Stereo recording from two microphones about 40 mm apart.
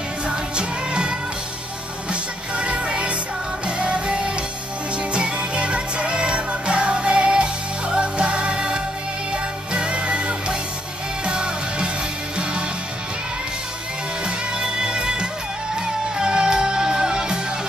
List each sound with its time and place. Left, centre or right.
0.3 s music: right
2.5 s music: right
14.2 s music: centre